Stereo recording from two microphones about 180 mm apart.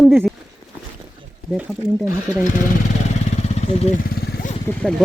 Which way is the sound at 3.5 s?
35° left (ahead or behind).